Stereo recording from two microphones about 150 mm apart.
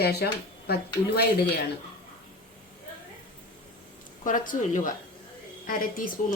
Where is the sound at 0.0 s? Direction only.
90° left.